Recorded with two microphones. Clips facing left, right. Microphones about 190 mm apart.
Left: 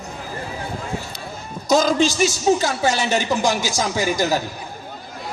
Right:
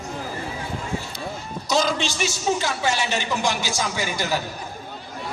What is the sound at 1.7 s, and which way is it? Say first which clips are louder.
A man's voice: left 6 dB; 45° left (ahead or behind).